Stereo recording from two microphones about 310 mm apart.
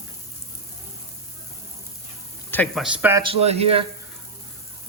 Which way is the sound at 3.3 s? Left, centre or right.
Centre.